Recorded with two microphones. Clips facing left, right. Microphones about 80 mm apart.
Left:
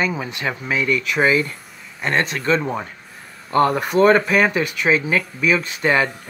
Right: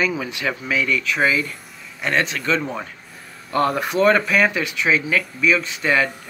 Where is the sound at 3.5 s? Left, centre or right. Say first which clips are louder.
Left 3 dB; left.